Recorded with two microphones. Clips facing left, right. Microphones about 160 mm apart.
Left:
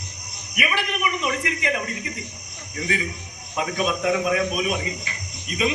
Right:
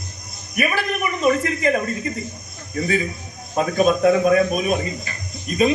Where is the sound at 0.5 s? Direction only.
45° right (ahead or behind).